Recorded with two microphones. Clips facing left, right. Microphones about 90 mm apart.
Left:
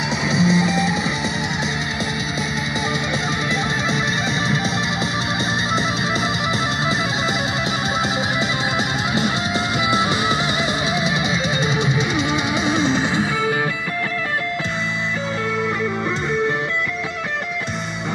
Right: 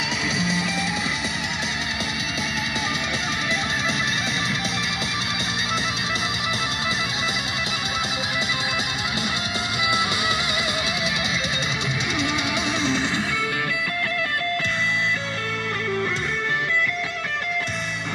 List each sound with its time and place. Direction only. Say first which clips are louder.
0.3 s music: left 10 dB; centre (ahead or behind)
9.8 s music: left 4 dB; 40° left (ahead or behind)
13.0 s music: left 5 dB; 5° left (ahead or behind)